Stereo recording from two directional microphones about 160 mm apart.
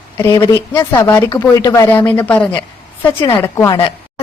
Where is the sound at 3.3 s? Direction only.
20° left (ahead or behind).